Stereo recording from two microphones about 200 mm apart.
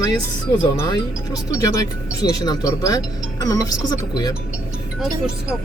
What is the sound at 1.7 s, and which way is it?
Speech, 20° left (ahead or behind).